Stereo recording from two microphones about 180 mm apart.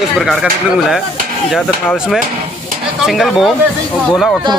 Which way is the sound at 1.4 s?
Centre (ahead or behind).